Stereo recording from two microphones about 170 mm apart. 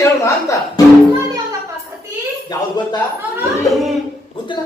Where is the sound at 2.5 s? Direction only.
25° left (ahead or behind).